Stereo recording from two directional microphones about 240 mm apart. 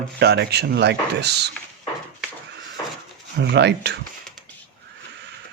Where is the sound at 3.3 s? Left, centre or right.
Right.